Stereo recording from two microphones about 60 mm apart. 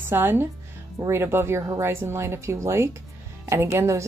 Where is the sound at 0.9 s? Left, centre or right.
Right.